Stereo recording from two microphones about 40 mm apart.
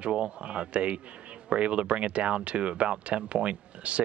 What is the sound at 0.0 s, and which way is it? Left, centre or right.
Speech, right.